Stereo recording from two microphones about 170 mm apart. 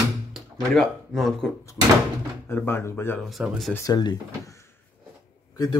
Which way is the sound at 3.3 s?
Centre (ahead or behind).